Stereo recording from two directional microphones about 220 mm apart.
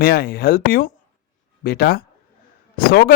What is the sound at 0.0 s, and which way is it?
Speech, 45° left (ahead or behind).